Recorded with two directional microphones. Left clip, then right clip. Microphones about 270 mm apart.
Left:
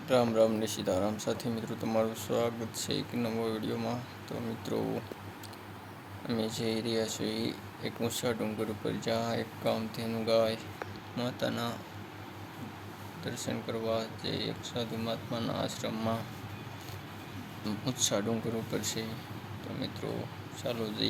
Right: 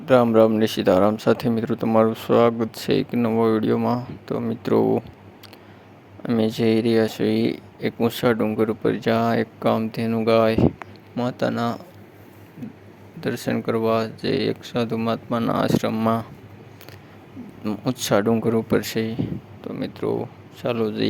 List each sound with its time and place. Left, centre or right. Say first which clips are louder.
0.0 s speech: right 11 dB; right
6.2 s speech: right 13 dB; right
13.2 s speech: right 13 dB; right
17.6 s speech: right 7 dB; right